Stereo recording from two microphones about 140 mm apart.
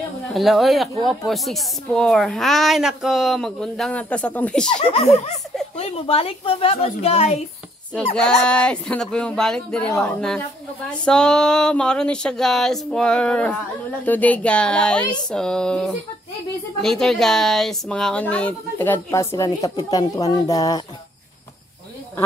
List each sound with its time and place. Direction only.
0.3 s a woman's voice: centre (ahead or behind)
4.7 s a woman's voice: 45° left (ahead or behind)
8.5 s a woman's voice: 5° left (ahead or behind); by 20.8 s 25° left (ahead or behind)